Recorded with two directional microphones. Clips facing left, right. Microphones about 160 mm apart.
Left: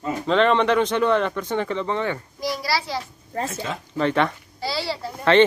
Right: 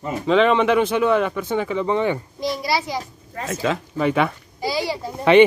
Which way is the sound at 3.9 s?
10° right (ahead or behind).